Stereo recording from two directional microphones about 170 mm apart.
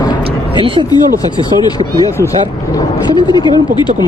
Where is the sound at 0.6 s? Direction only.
30° right (ahead or behind).